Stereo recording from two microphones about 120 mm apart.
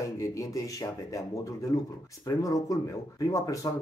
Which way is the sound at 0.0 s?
25° left (ahead or behind).